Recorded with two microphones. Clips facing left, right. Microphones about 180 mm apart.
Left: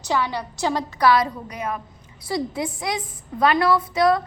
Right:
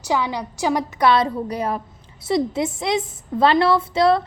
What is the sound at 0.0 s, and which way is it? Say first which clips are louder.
A woman's voice: right 2 dB; 10° right (ahead or behind).